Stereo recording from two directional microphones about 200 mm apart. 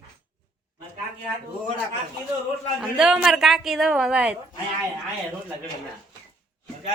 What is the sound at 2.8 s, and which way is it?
Speech, centre (ahead or behind).